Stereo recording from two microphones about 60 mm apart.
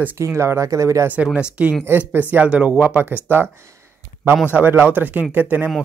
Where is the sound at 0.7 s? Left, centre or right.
Right.